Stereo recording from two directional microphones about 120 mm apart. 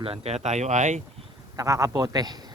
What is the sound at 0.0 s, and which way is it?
Speech, 55° right (ahead or behind).